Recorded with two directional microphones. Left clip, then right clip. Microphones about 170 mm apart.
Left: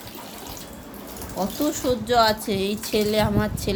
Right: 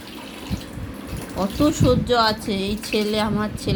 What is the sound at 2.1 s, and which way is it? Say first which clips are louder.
A woman's voice: even; 20° left (ahead or behind).